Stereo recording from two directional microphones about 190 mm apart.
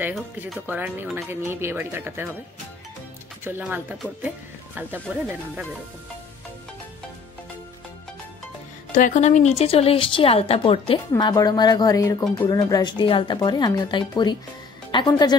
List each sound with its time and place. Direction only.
0.5 s speech: 10° right (ahead or behind)
3.4 s speech: 10° right (ahead or behind)
8.9 s a woman's voice: 40° left (ahead or behind); by 15.3 s 20° left (ahead or behind)